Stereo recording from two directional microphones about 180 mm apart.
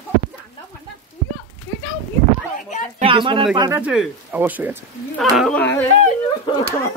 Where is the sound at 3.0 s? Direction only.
30° right (ahead or behind).